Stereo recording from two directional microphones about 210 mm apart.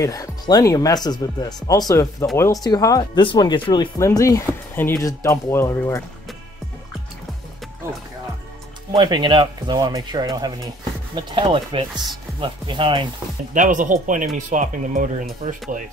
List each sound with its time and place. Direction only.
0.0 s speech: 15° left (ahead or behind)
8.9 s speech: 20° right (ahead or behind)
13.5 s speech: 40° right (ahead or behind)